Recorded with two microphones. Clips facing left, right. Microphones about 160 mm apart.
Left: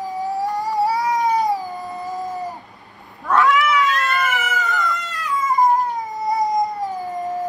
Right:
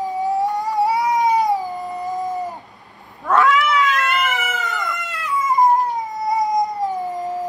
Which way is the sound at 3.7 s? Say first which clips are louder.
Even; 20° right (ahead or behind).